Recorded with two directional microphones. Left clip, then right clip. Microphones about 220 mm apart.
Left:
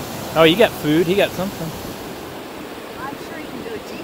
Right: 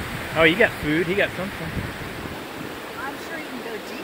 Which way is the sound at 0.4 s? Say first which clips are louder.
Left 4 dB; 15° left (ahead or behind).